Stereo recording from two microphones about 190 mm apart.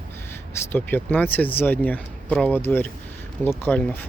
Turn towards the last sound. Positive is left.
turn(degrees=5)  # may be behind; listen again after turning